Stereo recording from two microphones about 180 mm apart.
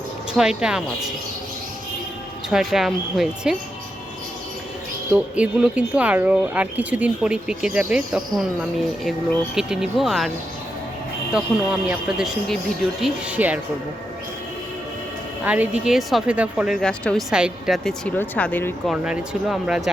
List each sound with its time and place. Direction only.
0.3 s a woman's voice: 5° right (ahead or behind)
2.5 s a woman's voice: centre (ahead or behind)
5.1 s a woman's voice: 5° right (ahead or behind)
11.3 s a woman's voice: 5° right (ahead or behind)
15.4 s a woman's voice: 10° right (ahead or behind); by 18.7 s 10° left (ahead or behind)
18.9 s a woman's voice: 5° right (ahead or behind)